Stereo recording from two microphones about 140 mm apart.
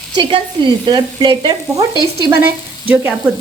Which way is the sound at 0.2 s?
35° right (ahead or behind).